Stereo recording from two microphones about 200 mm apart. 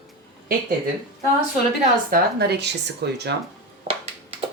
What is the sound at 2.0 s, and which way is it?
Speech, 55° right (ahead or behind).